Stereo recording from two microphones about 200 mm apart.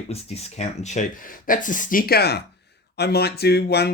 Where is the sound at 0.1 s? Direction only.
30° left (ahead or behind).